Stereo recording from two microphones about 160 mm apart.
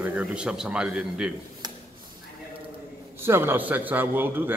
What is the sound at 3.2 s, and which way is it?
A man's voice, 15° right (ahead or behind).